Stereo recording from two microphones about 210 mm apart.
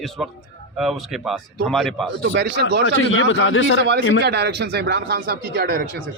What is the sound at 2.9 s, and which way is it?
Speech, 70° left (ahead or behind).